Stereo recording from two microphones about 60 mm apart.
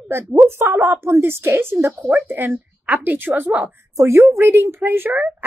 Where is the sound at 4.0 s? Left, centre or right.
Right.